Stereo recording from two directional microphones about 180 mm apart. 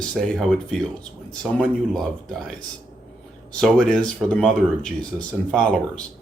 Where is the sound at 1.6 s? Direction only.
Centre (ahead or behind).